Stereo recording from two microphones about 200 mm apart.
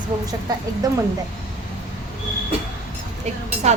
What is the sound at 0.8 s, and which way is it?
Speech, 20° right (ahead or behind).